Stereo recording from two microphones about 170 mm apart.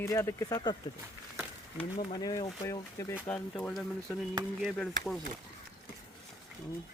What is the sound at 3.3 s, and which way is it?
A man's voice, 5° left (ahead or behind).